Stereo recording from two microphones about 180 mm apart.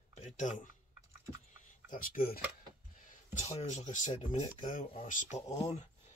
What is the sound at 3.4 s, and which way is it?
Speech, 40° left (ahead or behind).